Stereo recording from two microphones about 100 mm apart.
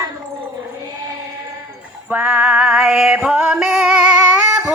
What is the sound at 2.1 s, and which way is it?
Music, 10° right (ahead or behind).